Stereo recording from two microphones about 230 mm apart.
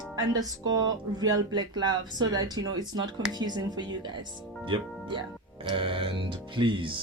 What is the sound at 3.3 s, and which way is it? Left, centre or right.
Speech, centre.